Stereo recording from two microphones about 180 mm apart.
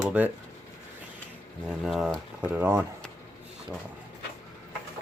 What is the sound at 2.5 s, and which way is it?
Speech, 15° right (ahead or behind).